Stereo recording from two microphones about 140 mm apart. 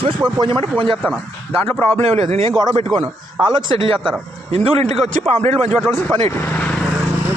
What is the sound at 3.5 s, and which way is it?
A man's voice, 35° right (ahead or behind).